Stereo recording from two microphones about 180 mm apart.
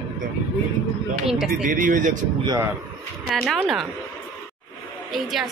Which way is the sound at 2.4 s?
20° right (ahead or behind).